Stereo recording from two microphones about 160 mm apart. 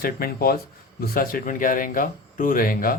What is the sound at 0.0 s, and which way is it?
Speech, 65° left (ahead or behind).